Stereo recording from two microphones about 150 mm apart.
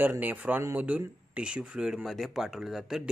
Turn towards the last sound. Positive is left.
turn(degrees=-5)  # may be behind; listen again after turning